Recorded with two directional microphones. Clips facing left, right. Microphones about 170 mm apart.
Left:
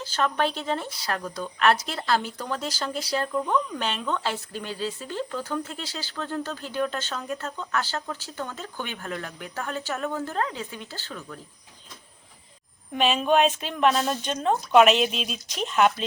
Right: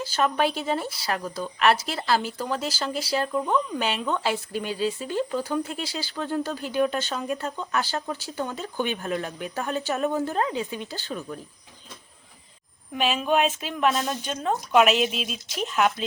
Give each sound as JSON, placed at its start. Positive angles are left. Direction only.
{"t": 0.0, "sound": "speech", "side_deg": -10}
{"t": 12.9, "sound": "speech", "side_deg": -5}